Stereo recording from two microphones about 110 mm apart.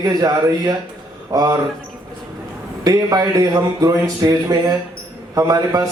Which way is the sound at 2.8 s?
35° right (ahead or behind).